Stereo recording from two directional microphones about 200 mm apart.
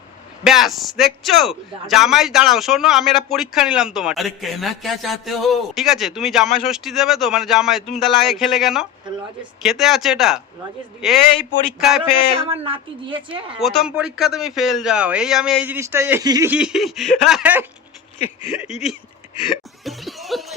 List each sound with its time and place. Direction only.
0.4 s a man's voice: centre (ahead or behind)
12.5 s a woman's voice: 30° right (ahead or behind)
13.6 s a man's voice: centre (ahead or behind); by 16.5 s 15° right (ahead or behind)
16.5 s a man's voice: 5° right (ahead or behind)
19.5 s a sound: centre (ahead or behind)